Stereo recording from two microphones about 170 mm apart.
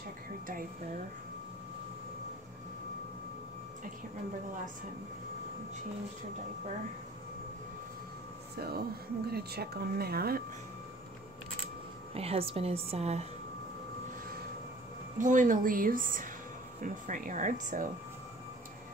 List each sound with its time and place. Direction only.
8.5 s speech: 65° right (ahead or behind)
12.1 s a woman's voice: 35° right (ahead or behind)
15.1 s a woman's voice: 50° right (ahead or behind)